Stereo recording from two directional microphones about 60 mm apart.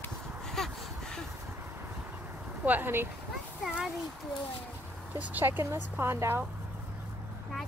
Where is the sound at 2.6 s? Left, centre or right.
Right.